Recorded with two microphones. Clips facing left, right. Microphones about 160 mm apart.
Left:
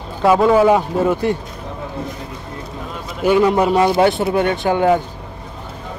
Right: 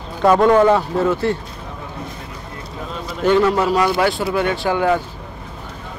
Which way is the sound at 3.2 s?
10° left (ahead or behind).